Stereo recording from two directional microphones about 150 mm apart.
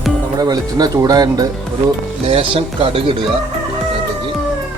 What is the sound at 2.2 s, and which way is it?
Speech, 40° right (ahead or behind).